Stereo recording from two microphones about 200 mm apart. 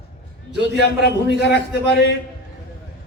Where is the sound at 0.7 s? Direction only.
55° left (ahead or behind).